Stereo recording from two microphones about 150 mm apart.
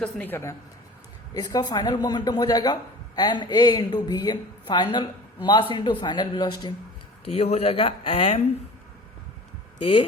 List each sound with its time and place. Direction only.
0.0 s a woman's voice: 10° left (ahead or behind); by 6.7 s 30° left (ahead or behind)
7.3 s speech: 45° left (ahead or behind)